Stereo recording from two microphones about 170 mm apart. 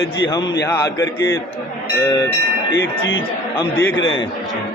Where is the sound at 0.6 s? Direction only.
20° left (ahead or behind).